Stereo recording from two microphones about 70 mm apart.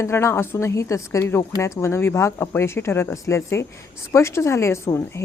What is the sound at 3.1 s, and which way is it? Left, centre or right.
A woman's voice, left.